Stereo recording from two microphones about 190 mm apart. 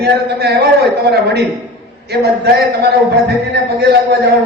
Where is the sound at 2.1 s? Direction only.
60° right (ahead or behind).